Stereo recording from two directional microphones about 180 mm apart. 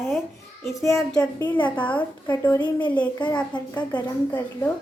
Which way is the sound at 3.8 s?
25° left (ahead or behind).